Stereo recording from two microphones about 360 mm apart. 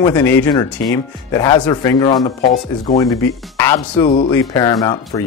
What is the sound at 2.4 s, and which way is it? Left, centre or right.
Speech, left.